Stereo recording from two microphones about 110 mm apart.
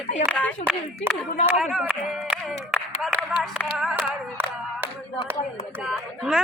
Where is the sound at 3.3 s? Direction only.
5° right (ahead or behind).